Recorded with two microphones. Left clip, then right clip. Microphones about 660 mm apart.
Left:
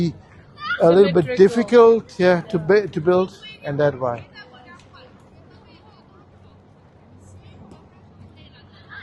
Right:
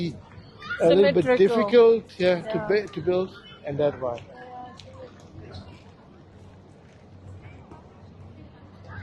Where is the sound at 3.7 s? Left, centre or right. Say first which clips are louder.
Left 5 dB; left.